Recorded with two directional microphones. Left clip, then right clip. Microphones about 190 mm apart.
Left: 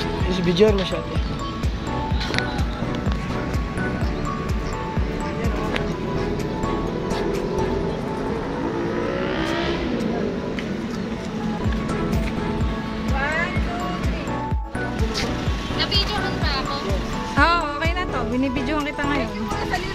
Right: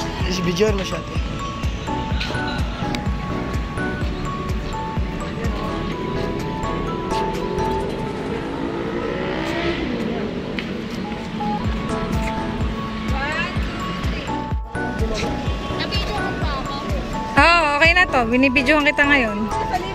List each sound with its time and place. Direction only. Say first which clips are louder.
0.3 s speech: left 2 dB; 15° left (ahead or behind)
17.4 s music: right 6 dB; 15° right (ahead or behind)